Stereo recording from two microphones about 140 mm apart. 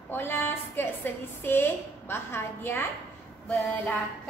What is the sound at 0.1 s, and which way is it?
A woman's voice, 15° left (ahead or behind).